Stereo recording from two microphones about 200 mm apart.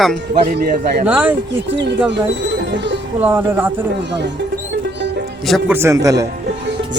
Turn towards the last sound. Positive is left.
turn(degrees=-15)  # may be behind; listen again after turning